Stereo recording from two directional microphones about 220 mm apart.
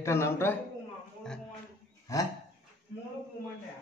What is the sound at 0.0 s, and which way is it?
Speech, 10° left (ahead or behind).